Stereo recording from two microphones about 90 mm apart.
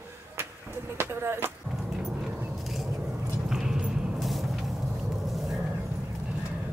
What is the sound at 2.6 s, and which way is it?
Vehicle, centre (ahead or behind).